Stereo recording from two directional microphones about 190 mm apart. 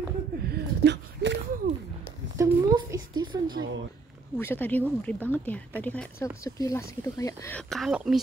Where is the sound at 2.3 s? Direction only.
20° right (ahead or behind).